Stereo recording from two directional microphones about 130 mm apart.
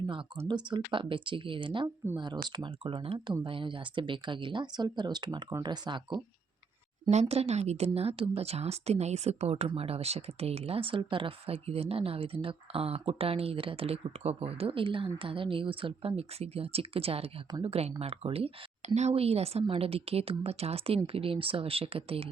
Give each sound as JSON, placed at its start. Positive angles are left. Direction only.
{"t": 0.4, "sound": "speech", "side_deg": -35}
{"t": 7.1, "sound": "speech", "side_deg": -55}